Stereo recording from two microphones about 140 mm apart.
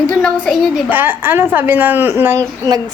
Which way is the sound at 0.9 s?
15° right (ahead or behind).